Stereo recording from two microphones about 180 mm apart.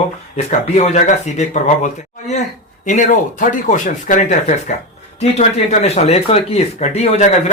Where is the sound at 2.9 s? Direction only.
45° left (ahead or behind).